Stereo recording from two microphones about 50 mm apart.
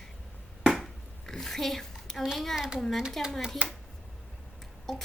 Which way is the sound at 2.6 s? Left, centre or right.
Centre.